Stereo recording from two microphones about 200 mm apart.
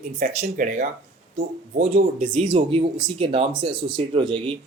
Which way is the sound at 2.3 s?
25° right (ahead or behind).